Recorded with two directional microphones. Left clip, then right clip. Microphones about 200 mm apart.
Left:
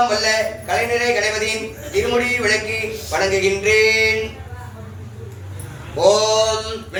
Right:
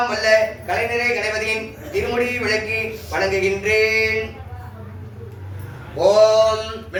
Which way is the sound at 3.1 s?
30° right (ahead or behind).